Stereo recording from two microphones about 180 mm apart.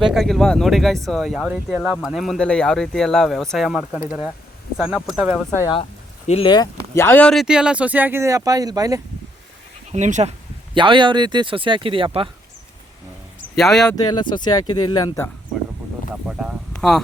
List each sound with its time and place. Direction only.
0.0 s speech: centre (ahead or behind)
5.5 s speech: 25° left (ahead or behind)
6.9 s speech: 10° left (ahead or behind); by 9.0 s 20° right (ahead or behind)
9.9 s speech: 40° right (ahead or behind)
10.8 s speech: 25° right (ahead or behind)
13.6 s speech: centre (ahead or behind)
13.9 s speech: 25° left (ahead or behind)
16.2 s speech: 5° right (ahead or behind)